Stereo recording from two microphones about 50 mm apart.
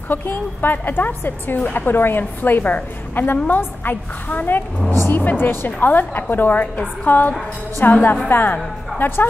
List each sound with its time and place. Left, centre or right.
0.1 s a woman's voice: left
2.0 s a woman's voice: left